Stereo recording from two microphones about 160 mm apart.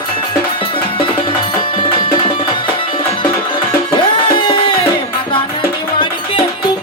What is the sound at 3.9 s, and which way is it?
Music, 30° left (ahead or behind).